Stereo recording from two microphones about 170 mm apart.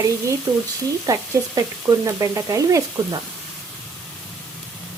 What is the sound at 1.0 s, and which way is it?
Frying, 20° right (ahead or behind).